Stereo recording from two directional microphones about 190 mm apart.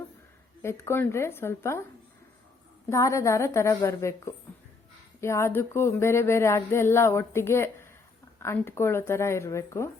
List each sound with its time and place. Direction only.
0.6 s speech: 15° left (ahead or behind)
2.9 s speech: 15° left (ahead or behind)